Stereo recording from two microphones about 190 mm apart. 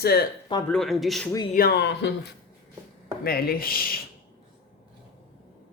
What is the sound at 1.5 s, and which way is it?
Speech, 60° left (ahead or behind).